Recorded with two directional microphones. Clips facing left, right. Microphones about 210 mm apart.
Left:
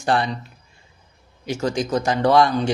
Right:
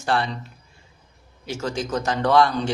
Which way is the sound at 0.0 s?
15° left (ahead or behind).